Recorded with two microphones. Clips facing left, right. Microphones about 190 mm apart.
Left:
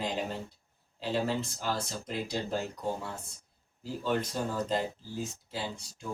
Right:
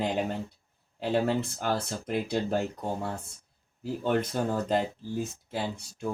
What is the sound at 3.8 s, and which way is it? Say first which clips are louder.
Speech: right 4 dB; 60° right (ahead or behind).